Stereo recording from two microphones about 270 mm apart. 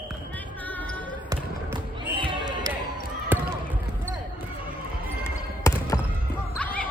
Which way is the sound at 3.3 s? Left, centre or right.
Centre.